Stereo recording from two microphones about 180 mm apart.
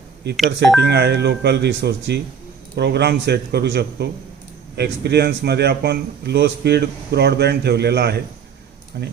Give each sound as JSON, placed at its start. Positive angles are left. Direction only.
{"t": 0.3, "sound": "speech", "side_deg": 0}
{"t": 0.8, "sound": "a man's voice", "side_deg": -70}